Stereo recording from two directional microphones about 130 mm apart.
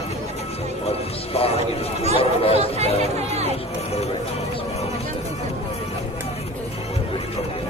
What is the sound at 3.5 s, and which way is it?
Music, 55° left (ahead or behind).